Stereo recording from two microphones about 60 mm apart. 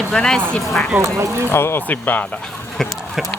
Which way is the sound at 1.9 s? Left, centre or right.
Left.